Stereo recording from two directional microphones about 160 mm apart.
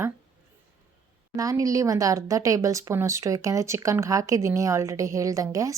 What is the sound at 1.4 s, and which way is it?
Speech, 20° right (ahead or behind).